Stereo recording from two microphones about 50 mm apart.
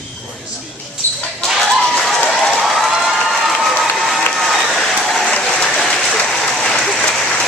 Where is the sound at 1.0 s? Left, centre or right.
Left.